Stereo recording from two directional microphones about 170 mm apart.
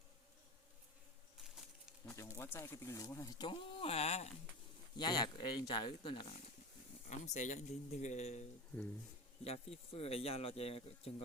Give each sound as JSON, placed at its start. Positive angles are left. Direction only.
{"t": 1.5, "sound": "a sound", "side_deg": 0}
{"t": 2.1, "sound": "speech", "side_deg": 15}
{"t": 4.9, "sound": "speech", "side_deg": 25}
{"t": 7.1, "sound": "speech", "side_deg": 45}